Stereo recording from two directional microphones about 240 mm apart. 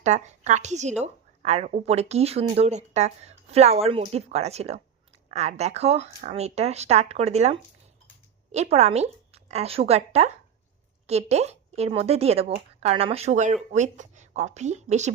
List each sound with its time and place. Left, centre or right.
0.0 s a woman's voice: right